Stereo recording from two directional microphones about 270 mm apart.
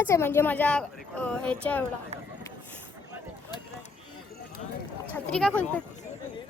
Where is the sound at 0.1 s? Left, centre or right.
Centre.